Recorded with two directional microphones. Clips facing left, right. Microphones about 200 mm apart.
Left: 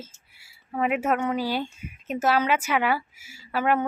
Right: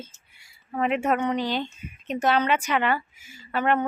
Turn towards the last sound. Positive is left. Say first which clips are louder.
# even
turn(degrees=5)  # may be behind; listen again after turning